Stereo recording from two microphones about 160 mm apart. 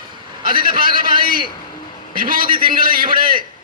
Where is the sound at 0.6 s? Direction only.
60° right (ahead or behind).